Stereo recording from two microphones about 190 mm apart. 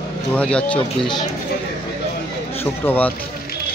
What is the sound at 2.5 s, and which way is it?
Speech, 10° left (ahead or behind).